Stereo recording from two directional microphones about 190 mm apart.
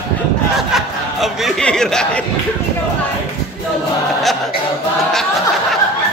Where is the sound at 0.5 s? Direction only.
Centre (ahead or behind).